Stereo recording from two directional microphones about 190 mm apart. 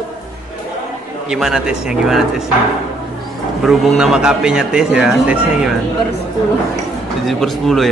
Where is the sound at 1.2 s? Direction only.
Centre (ahead or behind).